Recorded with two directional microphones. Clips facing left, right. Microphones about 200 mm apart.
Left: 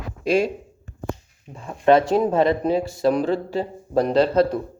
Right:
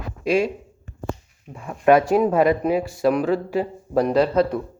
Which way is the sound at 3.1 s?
35° left (ahead or behind).